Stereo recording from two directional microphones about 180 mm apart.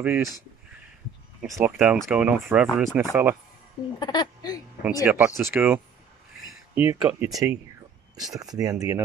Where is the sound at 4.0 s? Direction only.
25° left (ahead or behind).